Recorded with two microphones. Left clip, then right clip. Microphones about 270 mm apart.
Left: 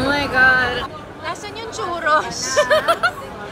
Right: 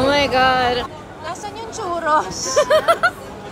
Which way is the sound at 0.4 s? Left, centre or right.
Right.